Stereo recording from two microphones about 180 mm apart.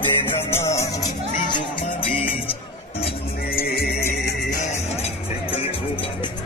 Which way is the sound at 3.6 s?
55° left (ahead or behind).